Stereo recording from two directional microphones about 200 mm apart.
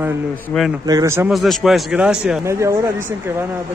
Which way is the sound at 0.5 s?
10° left (ahead or behind).